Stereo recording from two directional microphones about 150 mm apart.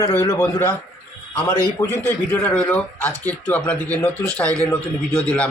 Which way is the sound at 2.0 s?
10° left (ahead or behind).